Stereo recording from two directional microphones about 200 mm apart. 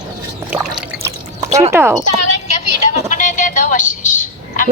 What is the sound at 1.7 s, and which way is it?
Speech, 15° right (ahead or behind).